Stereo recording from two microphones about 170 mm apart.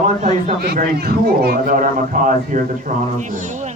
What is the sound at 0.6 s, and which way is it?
Speech, 65° right (ahead or behind).